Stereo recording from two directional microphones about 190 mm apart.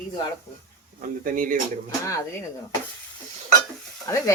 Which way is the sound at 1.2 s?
45° right (ahead or behind).